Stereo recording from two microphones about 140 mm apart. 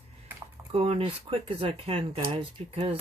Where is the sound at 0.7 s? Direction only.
45° right (ahead or behind).